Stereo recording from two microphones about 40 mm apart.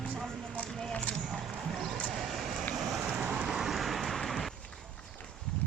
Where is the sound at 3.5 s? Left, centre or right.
Centre.